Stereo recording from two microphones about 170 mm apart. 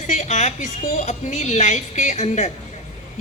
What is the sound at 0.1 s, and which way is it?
A woman's voice, 45° left (ahead or behind).